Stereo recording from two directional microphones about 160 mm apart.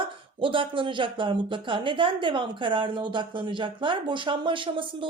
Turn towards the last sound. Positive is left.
turn(degrees=-30)  # may be behind; listen again after turning